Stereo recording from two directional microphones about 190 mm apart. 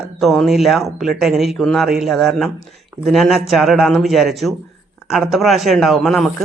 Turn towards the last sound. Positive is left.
turn(degrees=0)  # may be behind; listen again after turning